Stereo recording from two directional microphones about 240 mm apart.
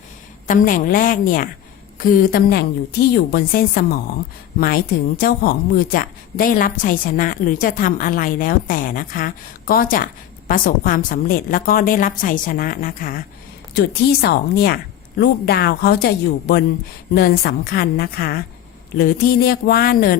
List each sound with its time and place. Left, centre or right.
0.4 s a woman's voice: left